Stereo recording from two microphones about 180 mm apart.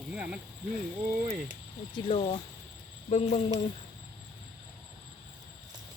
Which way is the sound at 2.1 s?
30° left (ahead or behind).